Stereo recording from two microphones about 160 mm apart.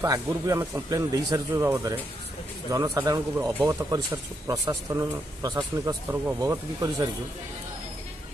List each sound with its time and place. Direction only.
0.0 s speech: 20° right (ahead or behind)